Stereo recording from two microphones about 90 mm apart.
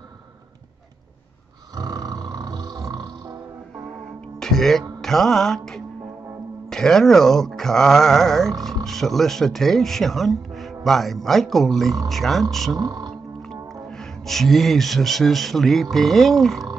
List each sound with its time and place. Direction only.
1.8 s roar: 45° right (ahead or behind)
4.4 s music: 5° left (ahead or behind)
6.7 s speech: 5° left (ahead or behind)
12.7 s speech: 40° right (ahead or behind)
13.4 s speech: 5° left (ahead or behind)